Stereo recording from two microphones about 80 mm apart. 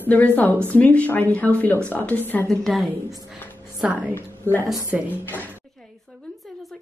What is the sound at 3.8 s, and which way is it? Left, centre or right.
Speech, centre.